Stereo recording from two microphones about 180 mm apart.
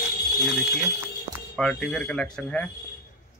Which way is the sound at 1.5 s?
5° left (ahead or behind).